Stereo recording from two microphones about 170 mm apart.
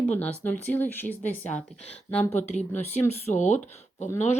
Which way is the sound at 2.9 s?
45° left (ahead or behind).